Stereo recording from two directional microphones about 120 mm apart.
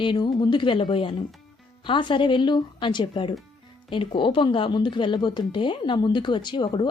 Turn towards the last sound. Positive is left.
turn(degrees=40)  # may be behind; listen again after turning